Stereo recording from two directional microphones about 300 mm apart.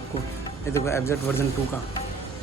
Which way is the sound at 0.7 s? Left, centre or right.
Centre.